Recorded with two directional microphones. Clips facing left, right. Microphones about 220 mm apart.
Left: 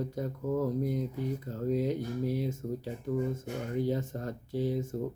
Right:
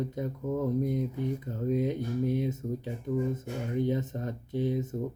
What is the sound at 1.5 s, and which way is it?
Speech, 20° right (ahead or behind).